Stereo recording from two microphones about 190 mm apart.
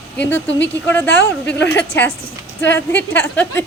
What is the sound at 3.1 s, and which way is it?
Speech, 10° left (ahead or behind).